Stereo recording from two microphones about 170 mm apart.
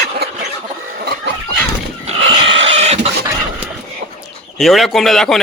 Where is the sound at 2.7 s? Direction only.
40° right (ahead or behind).